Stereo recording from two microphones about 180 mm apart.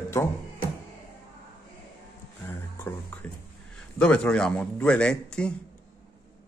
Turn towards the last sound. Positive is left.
turn(degrees=5)  # may be behind; listen again after turning